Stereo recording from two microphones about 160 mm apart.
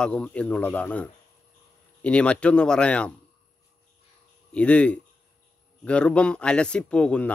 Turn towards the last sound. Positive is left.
turn(degrees=5)  # may be behind; listen again after turning